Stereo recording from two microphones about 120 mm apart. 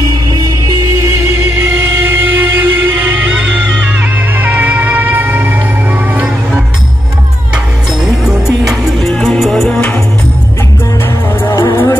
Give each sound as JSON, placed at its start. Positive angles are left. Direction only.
{"t": 2.0, "sound": "a sound", "side_deg": -15}
{"t": 4.0, "sound": "music", "side_deg": -15}
{"t": 8.0, "sound": "music", "side_deg": -5}
{"t": 11.5, "sound": "music", "side_deg": 30}